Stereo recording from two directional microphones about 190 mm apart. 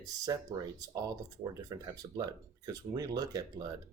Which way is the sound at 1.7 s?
20° right (ahead or behind).